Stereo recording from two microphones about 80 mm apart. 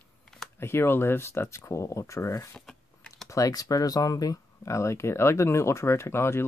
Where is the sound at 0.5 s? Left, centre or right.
Left.